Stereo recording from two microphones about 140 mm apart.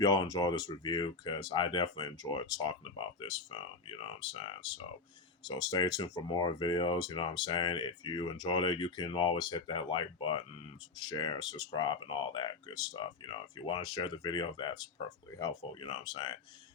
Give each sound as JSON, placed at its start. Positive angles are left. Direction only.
{"t": 0.0, "sound": "speech", "side_deg": 25}